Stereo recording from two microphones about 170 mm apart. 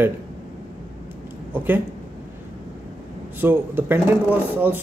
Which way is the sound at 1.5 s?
10° right (ahead or behind).